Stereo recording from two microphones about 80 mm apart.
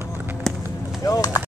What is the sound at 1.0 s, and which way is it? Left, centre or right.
Speech, left.